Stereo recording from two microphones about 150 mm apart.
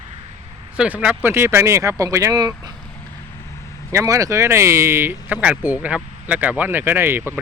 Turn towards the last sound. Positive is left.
turn(degrees=-15)  # may be behind; listen again after turning